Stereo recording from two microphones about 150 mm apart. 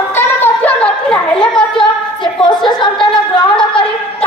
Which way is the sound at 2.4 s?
30° left (ahead or behind).